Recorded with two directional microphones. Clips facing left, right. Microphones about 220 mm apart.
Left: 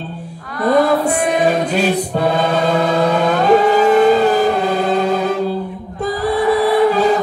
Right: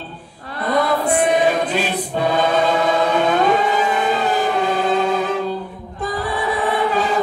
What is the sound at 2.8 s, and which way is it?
Music, 40° left (ahead or behind).